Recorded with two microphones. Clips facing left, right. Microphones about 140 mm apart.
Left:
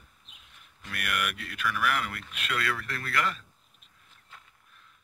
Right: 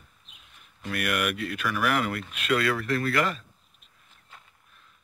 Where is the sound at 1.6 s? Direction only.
40° right (ahead or behind).